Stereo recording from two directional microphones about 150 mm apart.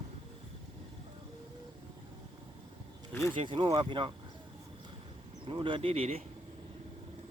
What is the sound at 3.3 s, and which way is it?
Speech, 35° right (ahead or behind).